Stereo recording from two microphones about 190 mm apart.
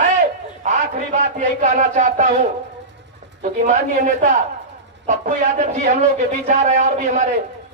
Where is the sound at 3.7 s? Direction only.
40° right (ahead or behind).